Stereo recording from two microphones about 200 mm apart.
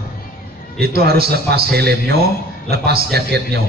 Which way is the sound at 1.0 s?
50° right (ahead or behind).